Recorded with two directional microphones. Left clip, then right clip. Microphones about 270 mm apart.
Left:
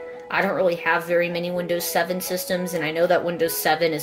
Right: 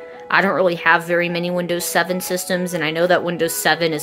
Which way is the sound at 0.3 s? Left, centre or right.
Right.